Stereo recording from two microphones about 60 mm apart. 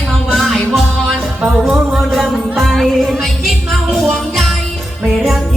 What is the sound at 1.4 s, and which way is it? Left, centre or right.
Music, right.